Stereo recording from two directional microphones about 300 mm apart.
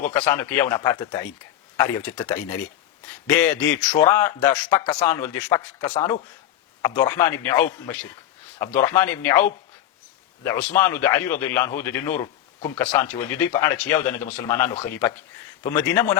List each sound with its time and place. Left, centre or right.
0.1 s speech: centre
5.9 s speech: centre
6.8 s speech: centre